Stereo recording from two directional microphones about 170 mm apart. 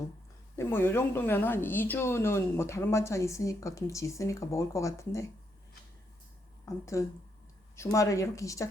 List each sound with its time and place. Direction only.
0.5 s speech: 15° left (ahead or behind)
6.7 s speech: 20° left (ahead or behind)